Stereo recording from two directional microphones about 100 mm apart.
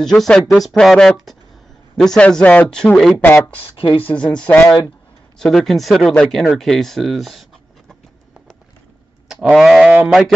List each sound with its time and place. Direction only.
0.0 s speech: 5° left (ahead or behind)
3.5 s speech: 55° left (ahead or behind)
4.0 s speech: 15° left (ahead or behind)
9.3 s bleat: 5° right (ahead or behind)
9.8 s speech: 15° right (ahead or behind)